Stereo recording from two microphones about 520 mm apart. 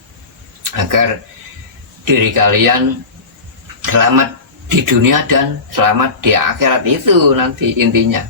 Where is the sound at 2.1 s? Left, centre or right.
Right.